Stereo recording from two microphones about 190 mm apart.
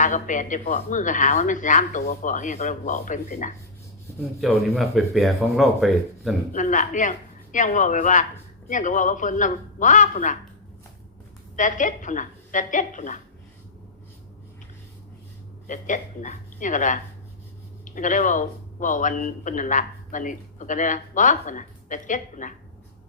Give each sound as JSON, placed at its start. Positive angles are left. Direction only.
{"t": 0.0, "sound": "speech", "side_deg": 40}
{"t": 4.4, "sound": "speech", "side_deg": 0}
{"t": 6.5, "sound": "speech", "side_deg": 40}
{"t": 11.5, "sound": "speech", "side_deg": 40}
{"t": 15.6, "sound": "speech", "side_deg": 40}